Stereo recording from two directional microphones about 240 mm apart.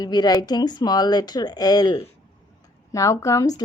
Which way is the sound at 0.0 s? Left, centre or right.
Centre.